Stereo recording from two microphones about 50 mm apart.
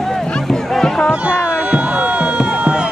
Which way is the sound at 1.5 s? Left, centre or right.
Right.